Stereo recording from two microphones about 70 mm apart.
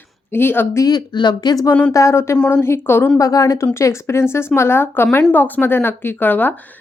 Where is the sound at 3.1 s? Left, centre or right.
Left.